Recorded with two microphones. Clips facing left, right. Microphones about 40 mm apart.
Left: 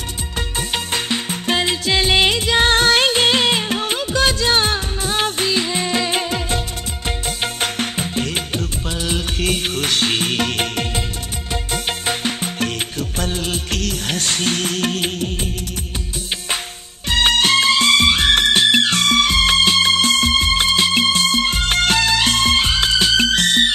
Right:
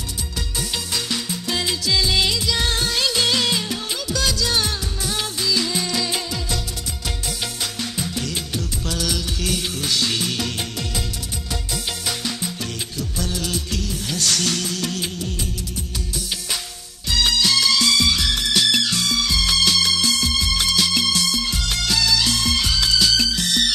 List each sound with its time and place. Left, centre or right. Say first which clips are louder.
0.6 s music: left 4 dB; left
7.6 s music: left 5 dB; left
8.9 s music: left 2 dB; left
9.4 s music: left 5 dB; left
13.2 s music of bollywood: left 3 dB; left
13.7 s music: left 4 dB; left
14.2 s music: left 1 dB; left
17.1 s music: left 4 dB; left